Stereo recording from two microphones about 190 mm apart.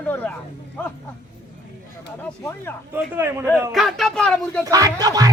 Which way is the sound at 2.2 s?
10° left (ahead or behind).